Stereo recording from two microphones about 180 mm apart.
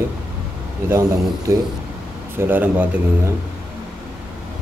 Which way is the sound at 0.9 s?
15° right (ahead or behind).